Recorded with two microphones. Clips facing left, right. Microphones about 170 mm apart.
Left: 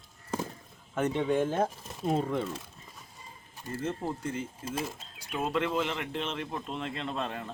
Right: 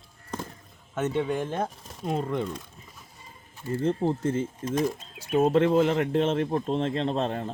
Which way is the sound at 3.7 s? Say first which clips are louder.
Right 8 dB; 25° right (ahead or behind).